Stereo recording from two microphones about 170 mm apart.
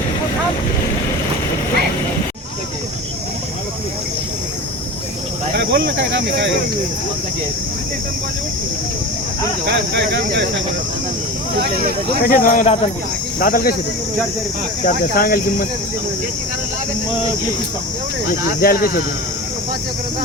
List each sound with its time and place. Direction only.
5.5 s speech: 90° right
9.6 s speech: 85° right
12.2 s speech: 55° left (ahead or behind)
14.8 s speech: 55° left (ahead or behind)
18.6 s speech: 60° left (ahead or behind)